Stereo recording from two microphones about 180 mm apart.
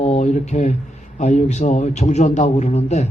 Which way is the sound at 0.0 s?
40° left (ahead or behind).